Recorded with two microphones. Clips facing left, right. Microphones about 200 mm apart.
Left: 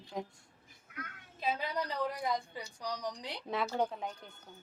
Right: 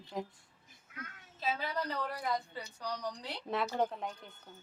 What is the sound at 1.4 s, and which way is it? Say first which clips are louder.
A woman's voice: left 1 dB; 15° left (ahead or behind).